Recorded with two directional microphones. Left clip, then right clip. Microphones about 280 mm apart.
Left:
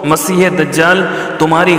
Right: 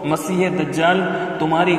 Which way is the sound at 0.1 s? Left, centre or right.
Left.